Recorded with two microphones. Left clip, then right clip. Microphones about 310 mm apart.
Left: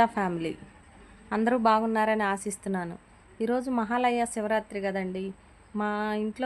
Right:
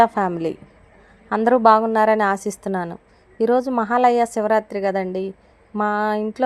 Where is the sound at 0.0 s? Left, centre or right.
Centre.